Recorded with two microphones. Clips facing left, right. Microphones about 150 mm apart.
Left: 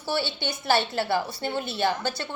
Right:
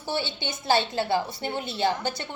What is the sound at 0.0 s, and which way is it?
A woman's voice, 20° right (ahead or behind).